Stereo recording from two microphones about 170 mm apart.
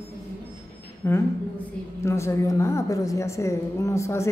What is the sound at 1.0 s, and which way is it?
A woman's voice, 15° left (ahead or behind).